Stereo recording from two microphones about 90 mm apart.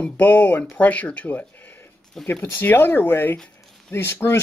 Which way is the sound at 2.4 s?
25° left (ahead or behind).